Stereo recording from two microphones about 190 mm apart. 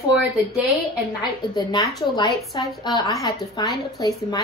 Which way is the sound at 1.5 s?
20° left (ahead or behind).